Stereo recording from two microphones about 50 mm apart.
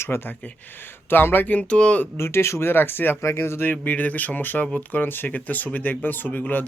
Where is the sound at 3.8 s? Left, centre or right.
Left.